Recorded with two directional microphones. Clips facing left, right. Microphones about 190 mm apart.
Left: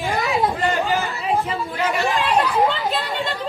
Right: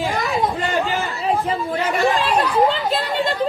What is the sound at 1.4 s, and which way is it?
Chatter, 35° right (ahead or behind).